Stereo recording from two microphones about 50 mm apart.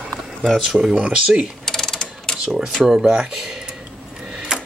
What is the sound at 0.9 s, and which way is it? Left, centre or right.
Speech, centre.